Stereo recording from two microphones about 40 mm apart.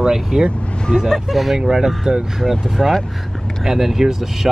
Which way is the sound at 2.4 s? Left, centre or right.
Centre.